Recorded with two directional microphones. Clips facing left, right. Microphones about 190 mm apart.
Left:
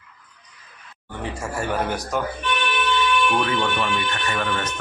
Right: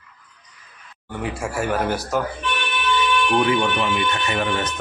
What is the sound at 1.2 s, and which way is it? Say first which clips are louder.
Speech: right 3 dB; 10° right (ahead or behind).